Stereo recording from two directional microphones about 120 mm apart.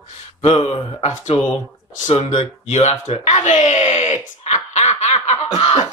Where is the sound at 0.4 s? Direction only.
50° left (ahead or behind).